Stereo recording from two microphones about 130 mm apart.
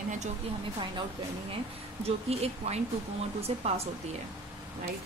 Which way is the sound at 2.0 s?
50° right (ahead or behind).